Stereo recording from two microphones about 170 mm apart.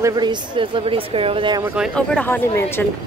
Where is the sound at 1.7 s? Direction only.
Centre (ahead or behind).